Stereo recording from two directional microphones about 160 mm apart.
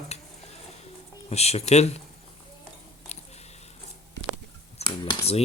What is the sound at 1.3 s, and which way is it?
Speech, 40° left (ahead or behind).